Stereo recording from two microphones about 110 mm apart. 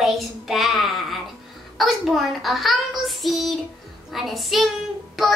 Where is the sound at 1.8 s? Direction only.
Centre (ahead or behind).